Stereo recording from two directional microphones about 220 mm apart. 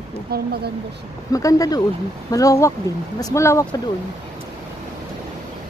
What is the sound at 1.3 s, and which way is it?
Speech, 15° left (ahead or behind).